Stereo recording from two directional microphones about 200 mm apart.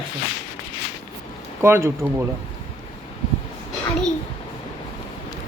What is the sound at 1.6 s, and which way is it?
Speech, 10° right (ahead or behind).